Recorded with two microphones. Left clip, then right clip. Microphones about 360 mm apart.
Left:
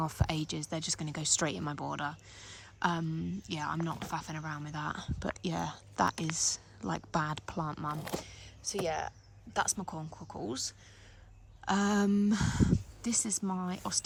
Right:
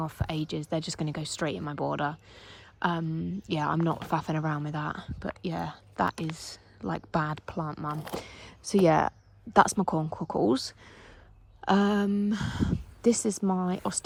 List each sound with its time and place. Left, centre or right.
0.0 s speech: centre
9.7 s speech: right
10.4 s speech: centre